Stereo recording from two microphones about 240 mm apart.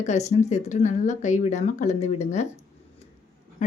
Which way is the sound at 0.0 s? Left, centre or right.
Left.